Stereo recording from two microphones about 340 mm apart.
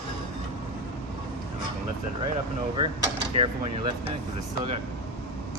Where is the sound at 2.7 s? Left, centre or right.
Centre.